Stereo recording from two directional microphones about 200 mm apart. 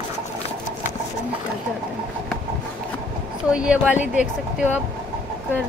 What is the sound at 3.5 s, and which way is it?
Speech, 5° right (ahead or behind).